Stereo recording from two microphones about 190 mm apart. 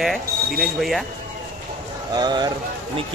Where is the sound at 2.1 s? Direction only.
20° right (ahead or behind).